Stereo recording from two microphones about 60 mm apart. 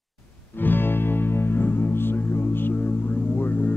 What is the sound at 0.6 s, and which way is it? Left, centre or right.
Music, left.